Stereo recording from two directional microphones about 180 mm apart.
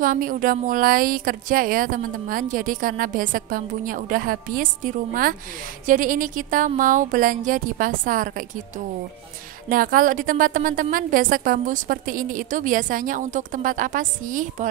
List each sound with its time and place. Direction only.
0.0 s speech: 50° right (ahead or behind)